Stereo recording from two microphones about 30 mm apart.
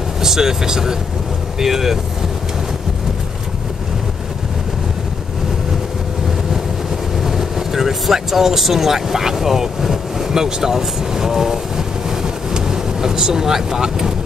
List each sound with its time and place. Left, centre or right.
0.2 s speech: centre
7.2 s speech: centre